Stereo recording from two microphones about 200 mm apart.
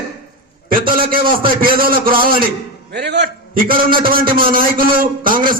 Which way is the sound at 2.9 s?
55° right (ahead or behind).